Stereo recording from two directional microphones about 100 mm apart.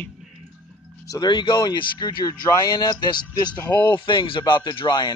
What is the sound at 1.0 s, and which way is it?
Speech, 45° left (ahead or behind).